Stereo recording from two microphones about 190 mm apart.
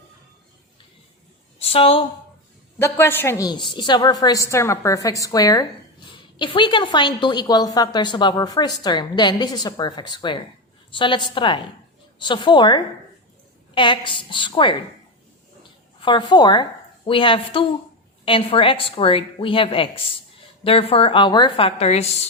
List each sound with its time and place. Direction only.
1.6 s a woman's voice: 30° left (ahead or behind)
2.7 s a woman's voice: 15° left (ahead or behind)
16.0 s a woman's voice: 25° left (ahead or behind)